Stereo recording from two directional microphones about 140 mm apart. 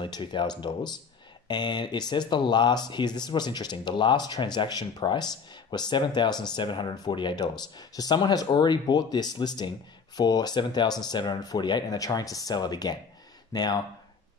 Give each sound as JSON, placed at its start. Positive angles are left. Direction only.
{"t": 0.0, "sound": "speech", "side_deg": 35}